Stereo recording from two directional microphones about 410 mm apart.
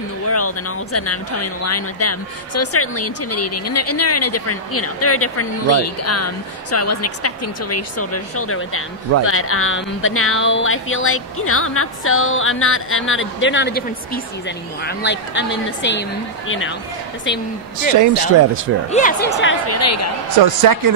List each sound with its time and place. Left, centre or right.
0.3 s a woman's voice: left
17.9 s speech: right
18.9 s speech: centre
19.7 s a woman's voice: left
20.4 s speech: right